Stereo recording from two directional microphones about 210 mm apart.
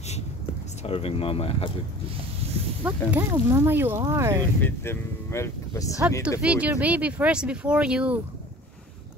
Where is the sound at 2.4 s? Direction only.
30° right (ahead or behind).